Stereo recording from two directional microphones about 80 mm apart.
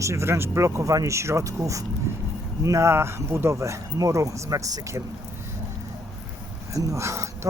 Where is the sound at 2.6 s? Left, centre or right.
Right.